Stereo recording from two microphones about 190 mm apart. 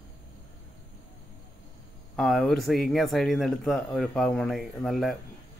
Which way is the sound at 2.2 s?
Centre (ahead or behind).